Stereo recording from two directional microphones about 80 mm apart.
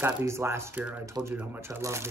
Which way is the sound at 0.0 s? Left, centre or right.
Right.